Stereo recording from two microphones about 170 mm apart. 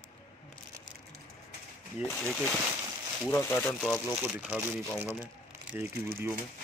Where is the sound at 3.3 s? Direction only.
10° left (ahead or behind).